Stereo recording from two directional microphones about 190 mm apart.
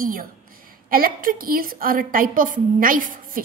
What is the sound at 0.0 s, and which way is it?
A woman's voice, 50° right (ahead or behind).